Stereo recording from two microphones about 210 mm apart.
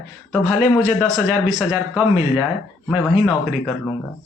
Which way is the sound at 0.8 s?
5° left (ahead or behind).